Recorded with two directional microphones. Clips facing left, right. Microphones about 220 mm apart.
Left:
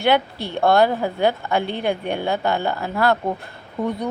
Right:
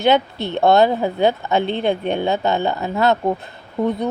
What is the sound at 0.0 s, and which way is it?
Speech, 20° right (ahead or behind).